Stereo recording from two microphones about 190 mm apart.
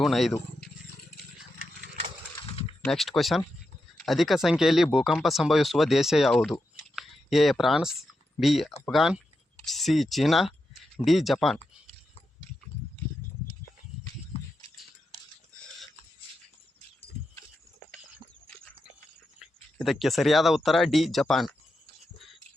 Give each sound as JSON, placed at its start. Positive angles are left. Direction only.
{"t": 0.0, "sound": "speech", "side_deg": 0}
{"t": 2.5, "sound": "a sound", "side_deg": 30}
{"t": 2.8, "sound": "speech", "side_deg": 0}
{"t": 19.4, "sound": "speech", "side_deg": 0}